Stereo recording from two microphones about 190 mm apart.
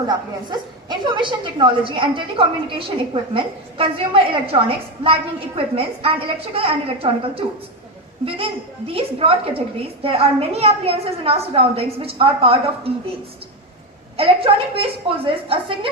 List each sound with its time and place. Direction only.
0.1 s a woman's voice: 25° right (ahead or behind)
5.5 s a woman's voice: 30° right (ahead or behind)
14.2 s a woman's voice: 30° right (ahead or behind)